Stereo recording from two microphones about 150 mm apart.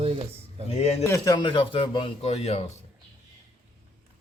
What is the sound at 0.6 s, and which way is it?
Speech, 40° left (ahead or behind).